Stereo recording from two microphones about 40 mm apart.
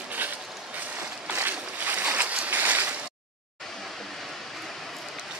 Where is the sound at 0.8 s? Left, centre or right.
Right.